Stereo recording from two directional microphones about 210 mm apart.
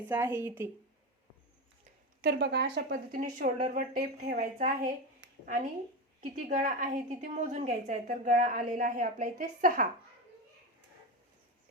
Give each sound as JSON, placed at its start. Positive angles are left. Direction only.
{"t": 0.1, "sound": "speech", "side_deg": -10}
{"t": 2.2, "sound": "speech", "side_deg": -55}
{"t": 3.3, "sound": "a woman's voice", "side_deg": -35}
{"t": 5.2, "sound": "a sound", "side_deg": -55}
{"t": 6.3, "sound": "a woman's voice", "side_deg": -40}